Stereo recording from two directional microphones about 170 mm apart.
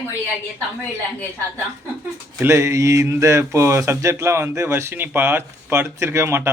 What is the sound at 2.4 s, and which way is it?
Speech, 15° right (ahead or behind).